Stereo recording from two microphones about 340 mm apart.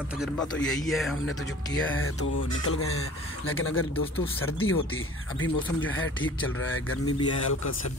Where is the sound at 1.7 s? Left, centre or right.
Left.